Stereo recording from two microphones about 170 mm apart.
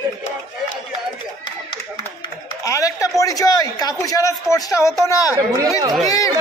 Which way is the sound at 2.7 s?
20° left (ahead or behind).